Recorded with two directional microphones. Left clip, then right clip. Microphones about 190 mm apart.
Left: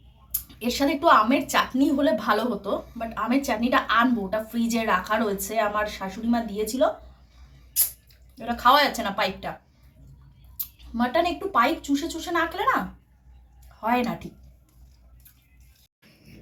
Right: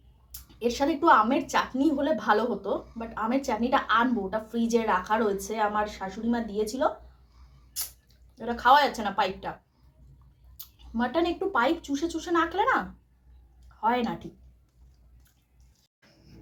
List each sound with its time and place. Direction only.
0.3 s a woman's voice: 15° right (ahead or behind)
8.4 s a woman's voice: 15° right (ahead or behind)
10.9 s a woman's voice: 15° right (ahead or behind)